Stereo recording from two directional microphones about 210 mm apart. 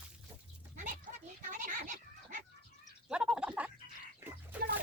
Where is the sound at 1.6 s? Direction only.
35° right (ahead or behind).